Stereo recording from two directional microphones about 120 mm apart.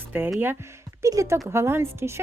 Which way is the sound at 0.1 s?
15° right (ahead or behind).